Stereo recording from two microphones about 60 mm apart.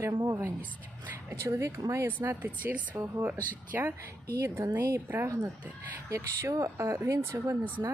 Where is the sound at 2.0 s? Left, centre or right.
Right.